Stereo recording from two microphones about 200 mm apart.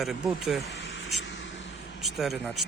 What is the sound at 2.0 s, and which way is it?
Speech, centre (ahead or behind).